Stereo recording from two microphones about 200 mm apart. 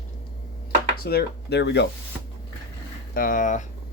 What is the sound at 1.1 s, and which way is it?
Speech, 55° left (ahead or behind).